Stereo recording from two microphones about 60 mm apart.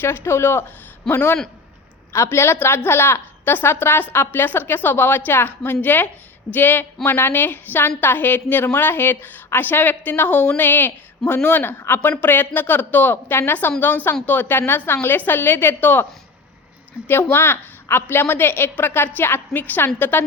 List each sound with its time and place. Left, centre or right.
0.0 s a woman's voice: left
2.1 s a woman's voice: left
17.1 s a woman's voice: left